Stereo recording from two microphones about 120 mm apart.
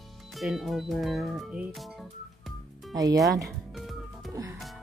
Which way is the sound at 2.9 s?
30° right (ahead or behind).